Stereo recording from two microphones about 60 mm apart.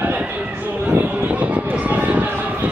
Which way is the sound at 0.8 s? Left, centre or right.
Right.